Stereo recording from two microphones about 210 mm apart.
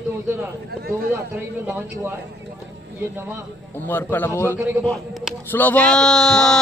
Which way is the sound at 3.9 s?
10° left (ahead or behind).